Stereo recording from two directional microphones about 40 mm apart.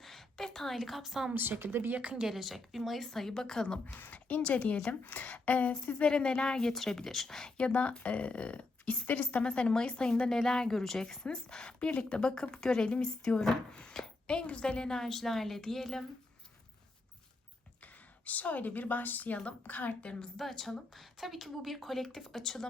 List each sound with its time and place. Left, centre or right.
0.0 s a sound: centre
0.8 s speech: centre
1.4 s speech: right
2.0 s a woman's voice: right
2.2 s speech: centre
3.1 s a woman's voice: centre
4.1 s a woman's voice: left
5.9 s a woman's voice: left
7.7 s speech: left
9.4 s a woman's voice: left
12.5 s a woman's voice: centre
14.3 s a woman's voice: left; by 16.0 s centre
17.8 s a woman's voice: left
20.3 s a woman's voice: centre